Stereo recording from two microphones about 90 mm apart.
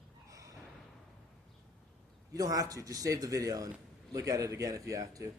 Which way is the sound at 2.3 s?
40° right (ahead or behind).